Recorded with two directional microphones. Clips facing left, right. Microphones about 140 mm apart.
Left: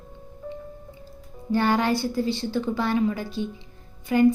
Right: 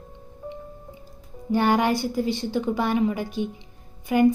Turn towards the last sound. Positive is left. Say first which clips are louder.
# even
turn(degrees=-15)  # may be behind; listen again after turning